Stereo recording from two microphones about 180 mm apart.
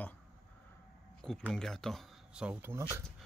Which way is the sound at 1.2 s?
5° left (ahead or behind).